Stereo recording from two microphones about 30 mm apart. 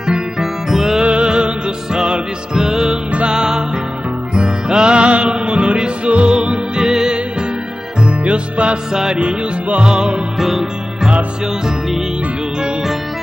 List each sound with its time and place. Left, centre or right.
0.0 s music: right
0.7 s music: centre
1.0 s music: right
2.0 s music: right
2.5 s music: centre; by 6.6 s right
6.8 s music: centre
8.0 s music: right
8.9 s music: centre
9.2 s music: right
9.8 s music: right